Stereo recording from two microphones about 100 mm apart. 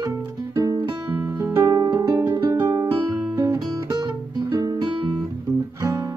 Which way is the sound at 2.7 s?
35° right (ahead or behind).